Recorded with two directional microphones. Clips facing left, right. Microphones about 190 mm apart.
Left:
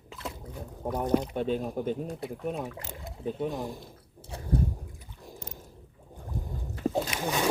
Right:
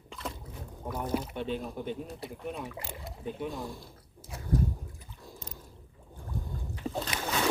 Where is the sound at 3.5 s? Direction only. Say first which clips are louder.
Left 4 dB; 20° left (ahead or behind).